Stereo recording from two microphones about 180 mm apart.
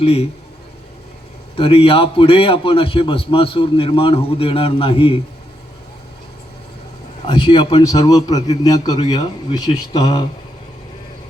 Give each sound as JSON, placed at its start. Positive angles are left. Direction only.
{"t": 0.0, "sound": "a man's voice", "side_deg": 35}
{"t": 1.5, "sound": "a man's voice", "side_deg": 30}
{"t": 7.3, "sound": "a man's voice", "side_deg": 30}